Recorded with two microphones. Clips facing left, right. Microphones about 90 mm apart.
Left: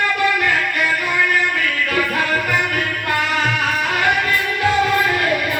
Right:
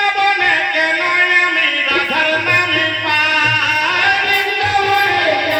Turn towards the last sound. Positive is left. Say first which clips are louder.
# right 4 dB
turn(degrees=-65)  # may be behind; listen again after turning